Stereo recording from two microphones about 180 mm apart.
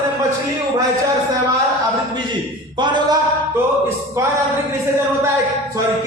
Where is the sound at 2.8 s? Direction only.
25° right (ahead or behind).